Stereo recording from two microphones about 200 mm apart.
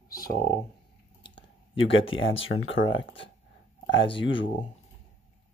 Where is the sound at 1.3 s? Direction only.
25° left (ahead or behind).